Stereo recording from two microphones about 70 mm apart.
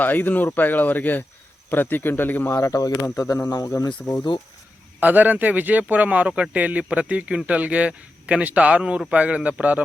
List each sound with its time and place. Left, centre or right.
0.0 s speech: left
2.6 s speech: left
3.8 s speech: left
4.9 s speech: right